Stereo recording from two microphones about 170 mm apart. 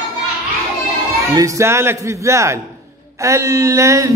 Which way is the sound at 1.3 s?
15° right (ahead or behind).